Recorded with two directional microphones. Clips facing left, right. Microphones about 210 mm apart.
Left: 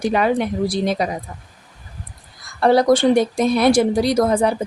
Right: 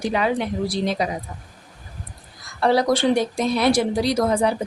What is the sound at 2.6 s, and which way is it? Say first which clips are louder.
A woman's voice: left 4 dB; 50° left (ahead or behind).